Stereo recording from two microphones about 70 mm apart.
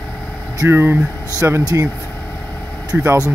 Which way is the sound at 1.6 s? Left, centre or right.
Right.